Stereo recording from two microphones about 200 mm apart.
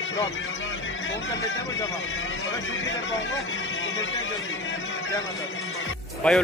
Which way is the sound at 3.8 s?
70° left (ahead or behind).